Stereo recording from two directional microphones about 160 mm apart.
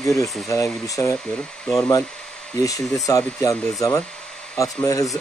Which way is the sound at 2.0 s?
5° left (ahead or behind).